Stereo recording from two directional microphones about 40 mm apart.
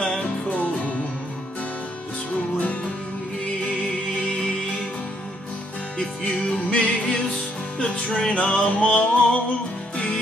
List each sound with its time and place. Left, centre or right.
0.5 s music: left
2.6 s music: left
5.9 s music: centre
7.8 s music: centre
8.6 s music: left